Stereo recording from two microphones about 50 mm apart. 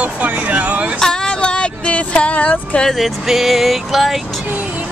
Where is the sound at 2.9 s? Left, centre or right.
Centre.